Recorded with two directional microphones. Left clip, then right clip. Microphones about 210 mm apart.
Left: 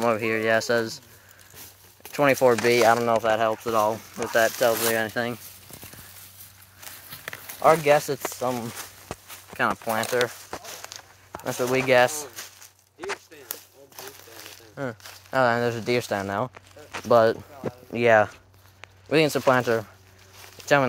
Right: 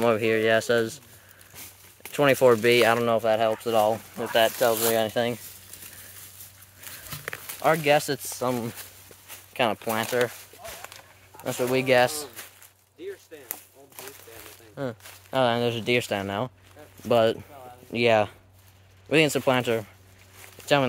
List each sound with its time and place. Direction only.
0.0 s speech: 30° right (ahead or behind)
2.1 s speech: 20° right (ahead or behind)
4.3 s speech: 5° right (ahead or behind)
4.9 s speech: 20° right (ahead or behind)
7.6 s speech: 10° right (ahead or behind)
9.6 s speech: 15° right (ahead or behind)
11.4 s speech: 15° right (ahead or behind)
13.5 s a sound: 30° left (ahead or behind)
15.3 s speech: 15° right (ahead or behind)